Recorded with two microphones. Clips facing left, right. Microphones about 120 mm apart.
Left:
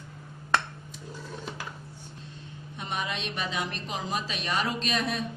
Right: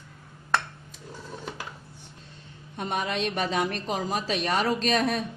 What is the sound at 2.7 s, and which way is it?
A woman's voice, 50° right (ahead or behind).